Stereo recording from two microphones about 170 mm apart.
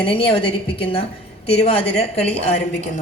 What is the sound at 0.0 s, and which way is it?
A woman's voice, 30° left (ahead or behind).